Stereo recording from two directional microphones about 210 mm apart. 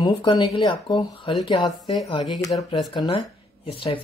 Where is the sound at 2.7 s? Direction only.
20° left (ahead or behind).